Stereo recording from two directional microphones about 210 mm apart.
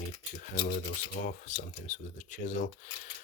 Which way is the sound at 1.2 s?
35° left (ahead or behind).